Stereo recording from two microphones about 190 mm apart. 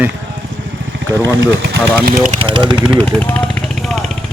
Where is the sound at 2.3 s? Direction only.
30° right (ahead or behind).